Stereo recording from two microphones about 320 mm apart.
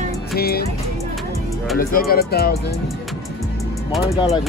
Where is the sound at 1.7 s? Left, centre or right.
Left.